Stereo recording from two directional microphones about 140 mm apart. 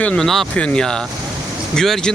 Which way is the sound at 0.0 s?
5° left (ahead or behind).